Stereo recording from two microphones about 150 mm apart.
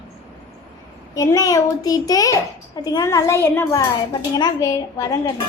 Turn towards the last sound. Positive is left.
turn(degrees=25)  # may be behind; listen again after turning